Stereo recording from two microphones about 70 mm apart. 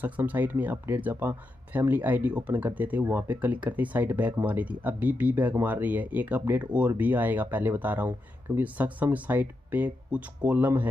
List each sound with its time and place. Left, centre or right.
0.0 s speech: right